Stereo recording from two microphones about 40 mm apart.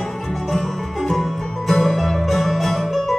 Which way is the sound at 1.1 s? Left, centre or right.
Centre.